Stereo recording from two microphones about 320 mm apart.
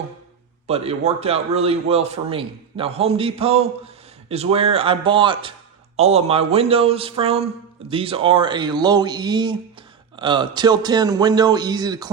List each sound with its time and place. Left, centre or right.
0.7 s a man's voice: centre